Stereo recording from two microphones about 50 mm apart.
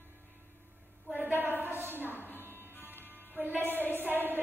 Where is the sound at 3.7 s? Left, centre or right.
Left.